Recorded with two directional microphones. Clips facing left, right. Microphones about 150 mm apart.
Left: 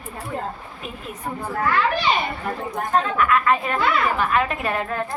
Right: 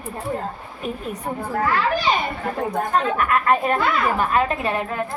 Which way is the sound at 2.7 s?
45° right (ahead or behind).